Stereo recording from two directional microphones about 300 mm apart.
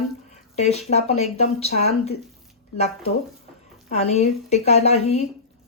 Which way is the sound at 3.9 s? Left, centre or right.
Left.